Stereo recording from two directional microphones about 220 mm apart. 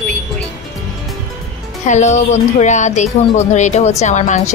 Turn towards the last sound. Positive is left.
turn(degrees=30)  # may be behind; listen again after turning